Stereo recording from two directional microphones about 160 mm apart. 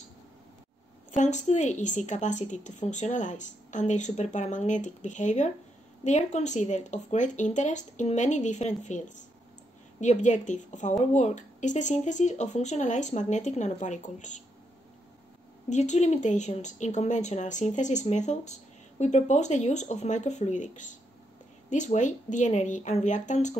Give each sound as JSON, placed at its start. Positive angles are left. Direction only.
{"t": 1.1, "sound": "speech", "side_deg": 50}
{"t": 15.7, "sound": "speech", "side_deg": 45}